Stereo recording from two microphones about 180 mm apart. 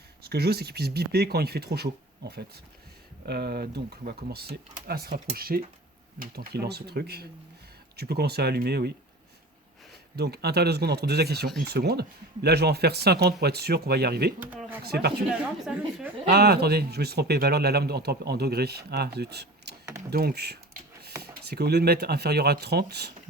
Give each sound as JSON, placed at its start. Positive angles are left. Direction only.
{"t": 0.2, "sound": "speech", "side_deg": -60}
{"t": 10.2, "sound": "speech", "side_deg": -65}
{"t": 15.3, "sound": "a woman's voice", "side_deg": -5}
{"t": 16.2, "sound": "speech", "side_deg": -65}